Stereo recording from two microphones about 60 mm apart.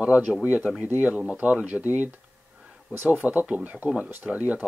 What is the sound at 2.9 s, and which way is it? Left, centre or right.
Speech, right.